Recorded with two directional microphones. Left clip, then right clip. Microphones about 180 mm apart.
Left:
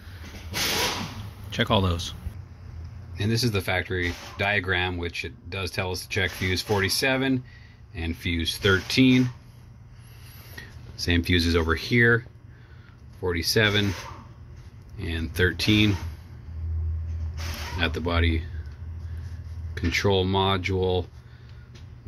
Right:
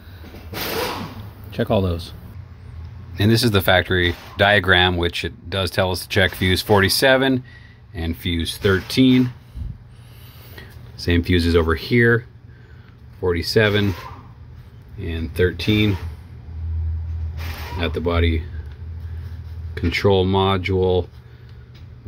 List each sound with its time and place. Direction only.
1.5 s speech: 5° left (ahead or behind)
3.2 s speech: 35° right (ahead or behind)
7.9 s speech: 20° right (ahead or behind)
10.5 s speech: 15° right (ahead or behind)
15.0 s speech: 10° right (ahead or behind)
17.7 s speech: 10° right (ahead or behind)
19.7 s speech: 15° right (ahead or behind)